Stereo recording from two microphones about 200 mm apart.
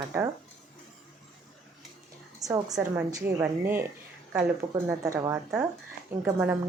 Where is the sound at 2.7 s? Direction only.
10° right (ahead or behind).